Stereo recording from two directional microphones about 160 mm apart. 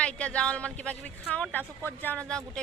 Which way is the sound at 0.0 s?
5° left (ahead or behind).